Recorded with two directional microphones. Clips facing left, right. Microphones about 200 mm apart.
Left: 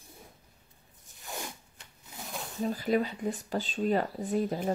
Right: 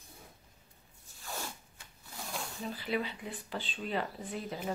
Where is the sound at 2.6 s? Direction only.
45° left (ahead or behind).